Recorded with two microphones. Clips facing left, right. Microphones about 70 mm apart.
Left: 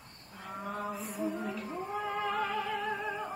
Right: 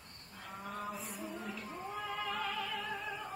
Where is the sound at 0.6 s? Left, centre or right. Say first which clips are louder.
Left 4 dB; centre.